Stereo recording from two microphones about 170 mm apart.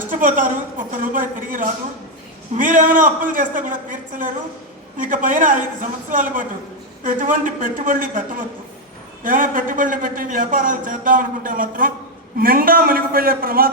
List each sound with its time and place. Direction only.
0.1 s a man's voice: 50° right (ahead or behind)